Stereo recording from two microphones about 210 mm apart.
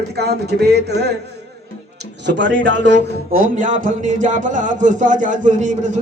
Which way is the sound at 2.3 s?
60° right (ahead or behind).